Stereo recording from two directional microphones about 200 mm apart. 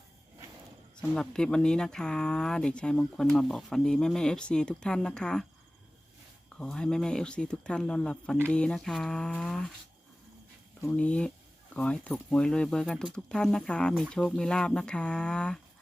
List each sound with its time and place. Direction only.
1.1 s speech: 5° left (ahead or behind)
6.6 s speech: 5° left (ahead or behind)
10.8 s speech: 5° left (ahead or behind)